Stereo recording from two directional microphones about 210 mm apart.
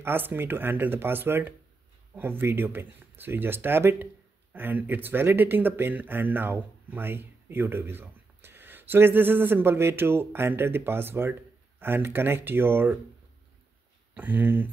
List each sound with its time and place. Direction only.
0.0 s speech: 10° right (ahead or behind)
14.1 s speech: 10° right (ahead or behind)